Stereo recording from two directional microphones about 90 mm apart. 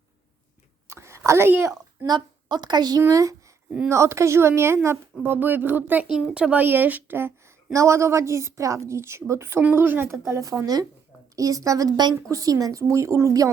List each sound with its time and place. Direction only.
0.9 s a sound: 30° right (ahead or behind)
2.0 s a woman's voice: 50° right (ahead or behind)
3.1 s a woman's voice: 35° right (ahead or behind); by 6.1 s 20° right (ahead or behind)
6.1 s a woman's voice: 10° right (ahead or behind); by 13.5 s 35° right (ahead or behind)